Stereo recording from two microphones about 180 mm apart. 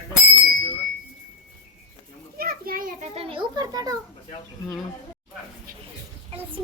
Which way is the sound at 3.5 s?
20° right (ahead or behind).